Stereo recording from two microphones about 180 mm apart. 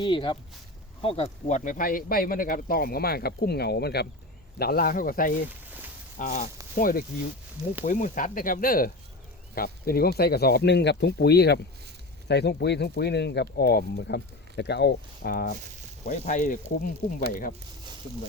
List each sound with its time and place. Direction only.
0.0 s speech: 25° left (ahead or behind); by 15.5 s 55° left (ahead or behind)
16.0 s speech: 40° left (ahead or behind)